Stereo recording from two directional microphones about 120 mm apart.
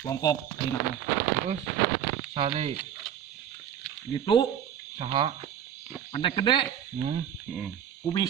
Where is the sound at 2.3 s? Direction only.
45° right (ahead or behind).